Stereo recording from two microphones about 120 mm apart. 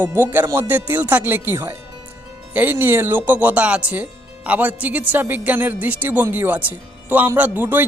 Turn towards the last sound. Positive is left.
turn(degrees=-15)  # may be behind; listen again after turning